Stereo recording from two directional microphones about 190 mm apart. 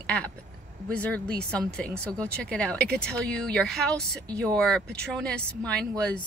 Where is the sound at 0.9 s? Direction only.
5° left (ahead or behind).